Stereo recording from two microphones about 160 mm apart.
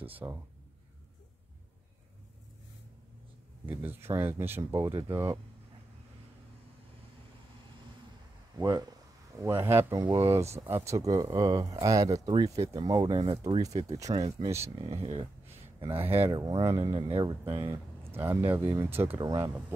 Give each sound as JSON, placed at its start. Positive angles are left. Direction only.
{"t": 0.2, "sound": "speech", "side_deg": -15}
{"t": 3.6, "sound": "speech", "side_deg": -10}
{"t": 8.5, "sound": "speech", "side_deg": -25}
{"t": 14.4, "sound": "speech", "side_deg": -15}
{"t": 14.8, "sound": "speech", "side_deg": -40}
{"t": 16.0, "sound": "speech", "side_deg": -15}
{"t": 16.3, "sound": "speech", "side_deg": -25}
{"t": 18.1, "sound": "speech", "side_deg": -15}